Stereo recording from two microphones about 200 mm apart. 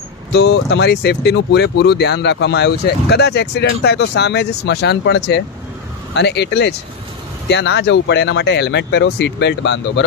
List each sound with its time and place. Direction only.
0.3 s speech: 60° left (ahead or behind)